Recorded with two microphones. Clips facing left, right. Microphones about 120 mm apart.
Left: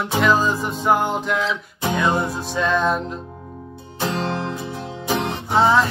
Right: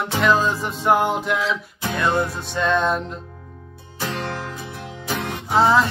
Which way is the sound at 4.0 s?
25° left (ahead or behind).